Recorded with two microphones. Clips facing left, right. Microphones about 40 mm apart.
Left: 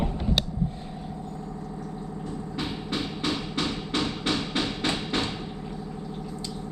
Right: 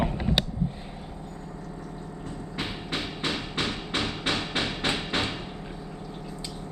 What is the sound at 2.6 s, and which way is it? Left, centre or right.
Music, right.